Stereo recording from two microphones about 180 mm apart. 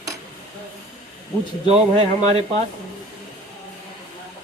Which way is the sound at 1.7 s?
35° right (ahead or behind).